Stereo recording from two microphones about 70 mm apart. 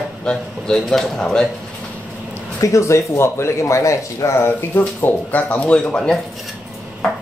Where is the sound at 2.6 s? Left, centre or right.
Left; by 6.1 s centre.